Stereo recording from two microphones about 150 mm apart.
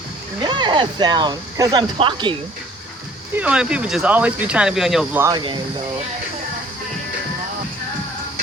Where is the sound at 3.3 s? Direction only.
10° right (ahead or behind).